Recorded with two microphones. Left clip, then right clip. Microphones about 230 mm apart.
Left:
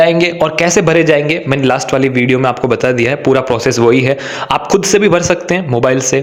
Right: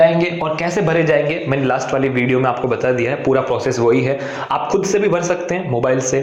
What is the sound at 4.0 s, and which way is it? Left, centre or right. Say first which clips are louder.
Speech: left 5 dB; left.